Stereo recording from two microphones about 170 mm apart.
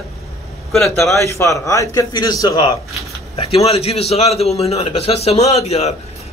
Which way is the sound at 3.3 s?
35° left (ahead or behind).